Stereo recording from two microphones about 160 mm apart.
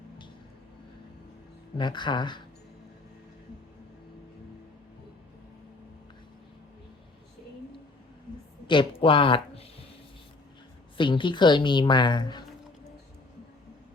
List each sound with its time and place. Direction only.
1.8 s a woman's voice: 30° left (ahead or behind)
8.6 s speech: 30° left (ahead or behind)
10.9 s a woman's voice: 30° left (ahead or behind)